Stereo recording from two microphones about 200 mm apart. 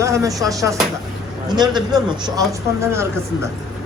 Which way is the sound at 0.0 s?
15° right (ahead or behind).